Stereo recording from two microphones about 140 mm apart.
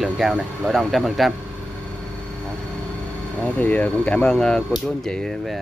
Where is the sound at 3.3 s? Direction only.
10° left (ahead or behind).